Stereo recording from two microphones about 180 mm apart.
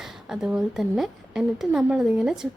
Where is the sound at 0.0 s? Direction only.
5° right (ahead or behind).